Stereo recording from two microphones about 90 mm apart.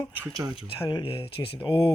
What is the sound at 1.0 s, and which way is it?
Speech, 80° left.